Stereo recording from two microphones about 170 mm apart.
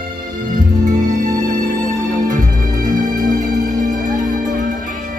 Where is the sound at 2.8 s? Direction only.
50° right (ahead or behind).